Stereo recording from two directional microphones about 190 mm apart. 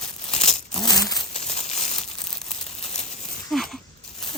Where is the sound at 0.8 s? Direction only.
20° left (ahead or behind).